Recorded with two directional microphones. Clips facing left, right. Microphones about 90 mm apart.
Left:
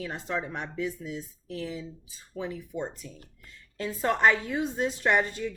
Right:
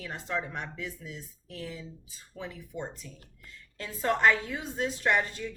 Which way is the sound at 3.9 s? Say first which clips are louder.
Left 1 dB; 25° left (ahead or behind).